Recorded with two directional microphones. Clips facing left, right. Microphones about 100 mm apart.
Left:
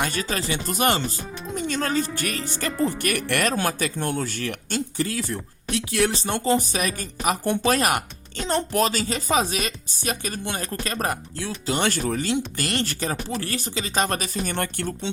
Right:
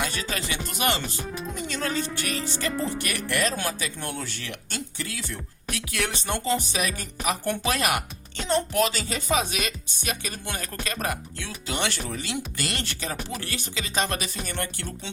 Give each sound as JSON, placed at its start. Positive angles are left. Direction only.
{"t": 0.0, "sound": "speech", "side_deg": 40}
{"t": 3.7, "sound": "speech", "side_deg": 50}
{"t": 3.9, "sound": "speech", "side_deg": 35}
{"t": 5.7, "sound": "speech", "side_deg": 30}
{"t": 6.6, "sound": "speech", "side_deg": 45}
{"t": 10.4, "sound": "speech", "side_deg": 25}
{"t": 10.8, "sound": "speech", "side_deg": 40}